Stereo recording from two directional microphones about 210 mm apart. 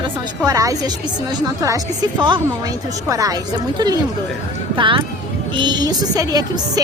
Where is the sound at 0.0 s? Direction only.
15° right (ahead or behind).